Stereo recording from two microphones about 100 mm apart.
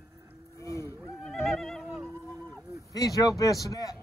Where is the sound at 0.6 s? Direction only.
30° left (ahead or behind).